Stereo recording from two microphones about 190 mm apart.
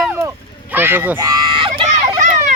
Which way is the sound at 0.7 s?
10° right (ahead or behind).